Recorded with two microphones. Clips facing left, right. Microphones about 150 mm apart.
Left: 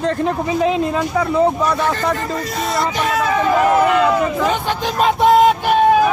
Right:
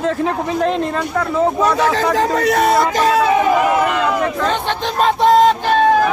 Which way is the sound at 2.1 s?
85° right.